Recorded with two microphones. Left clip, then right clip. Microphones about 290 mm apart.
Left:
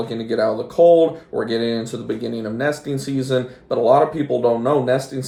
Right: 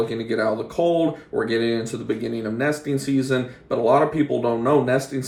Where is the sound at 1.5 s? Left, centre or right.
Centre.